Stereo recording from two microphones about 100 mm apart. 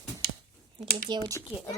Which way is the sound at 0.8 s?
45° right (ahead or behind).